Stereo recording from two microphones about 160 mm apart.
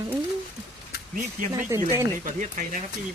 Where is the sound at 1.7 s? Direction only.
15° right (ahead or behind).